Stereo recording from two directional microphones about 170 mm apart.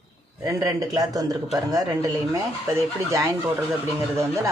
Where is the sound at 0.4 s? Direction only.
20° right (ahead or behind).